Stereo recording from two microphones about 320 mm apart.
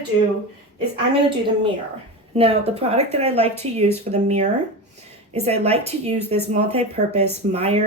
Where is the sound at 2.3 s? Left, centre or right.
Centre.